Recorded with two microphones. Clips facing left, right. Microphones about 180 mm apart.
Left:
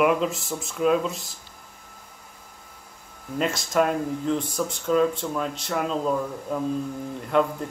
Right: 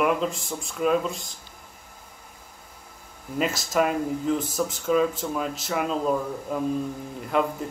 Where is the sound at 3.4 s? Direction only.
5° right (ahead or behind).